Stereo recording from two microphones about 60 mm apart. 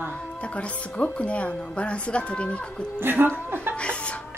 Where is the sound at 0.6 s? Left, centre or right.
Centre.